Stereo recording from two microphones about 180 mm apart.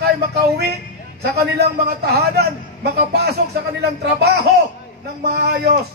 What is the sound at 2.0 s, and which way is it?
A man's voice, 65° right (ahead or behind).